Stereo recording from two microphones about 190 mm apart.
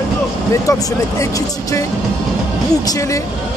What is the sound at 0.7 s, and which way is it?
Speech, 20° left (ahead or behind).